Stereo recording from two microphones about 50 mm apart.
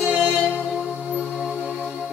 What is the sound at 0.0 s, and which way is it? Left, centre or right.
Music, centre.